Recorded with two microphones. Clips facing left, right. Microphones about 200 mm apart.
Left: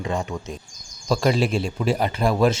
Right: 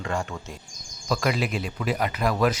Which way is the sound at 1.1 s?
30° left (ahead or behind).